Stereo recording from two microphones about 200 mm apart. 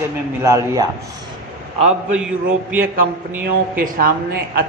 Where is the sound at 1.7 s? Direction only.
35° right (ahead or behind).